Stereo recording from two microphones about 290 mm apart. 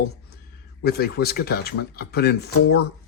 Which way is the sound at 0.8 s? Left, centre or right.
Left.